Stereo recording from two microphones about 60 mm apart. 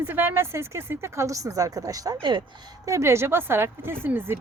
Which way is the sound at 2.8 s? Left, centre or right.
Right.